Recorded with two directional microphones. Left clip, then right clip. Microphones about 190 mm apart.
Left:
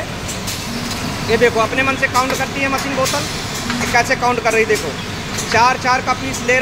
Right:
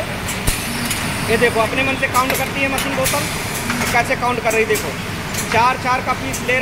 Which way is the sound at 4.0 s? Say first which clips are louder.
Left 4 dB; 10° left (ahead or behind).